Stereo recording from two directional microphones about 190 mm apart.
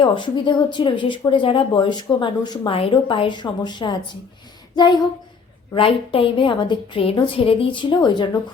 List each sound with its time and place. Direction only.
0.0 s speech: 25° left (ahead or behind)
5.7 s speech: 30° left (ahead or behind)